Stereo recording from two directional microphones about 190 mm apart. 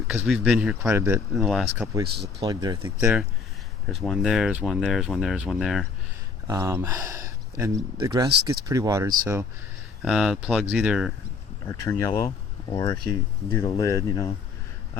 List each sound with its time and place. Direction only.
0.3 s speech: centre (ahead or behind)
1.4 s speech: centre (ahead or behind)
2.4 s speech: 20° right (ahead or behind)
2.8 s speech: 10° right (ahead or behind)
6.5 s speech: 15° right (ahead or behind)
8.3 s speech: 60° right (ahead or behind)
8.6 s speech: 20° right (ahead or behind)
10.0 s speech: centre (ahead or behind)
11.7 s speech: 15° left (ahead or behind)